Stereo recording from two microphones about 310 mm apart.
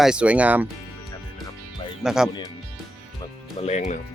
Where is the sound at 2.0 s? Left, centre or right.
Centre.